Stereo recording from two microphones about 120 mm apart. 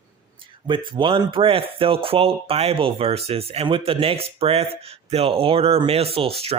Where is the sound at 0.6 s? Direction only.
40° right (ahead or behind).